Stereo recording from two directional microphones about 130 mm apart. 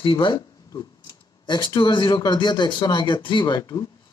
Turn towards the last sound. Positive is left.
turn(degrees=30)  # may be behind; listen again after turning